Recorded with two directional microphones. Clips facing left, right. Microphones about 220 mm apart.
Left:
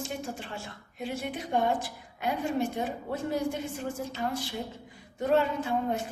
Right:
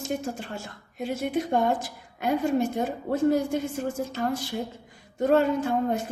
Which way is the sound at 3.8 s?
45° right (ahead or behind).